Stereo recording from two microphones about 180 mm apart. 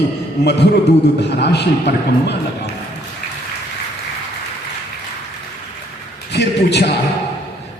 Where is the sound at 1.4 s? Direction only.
70° left (ahead or behind).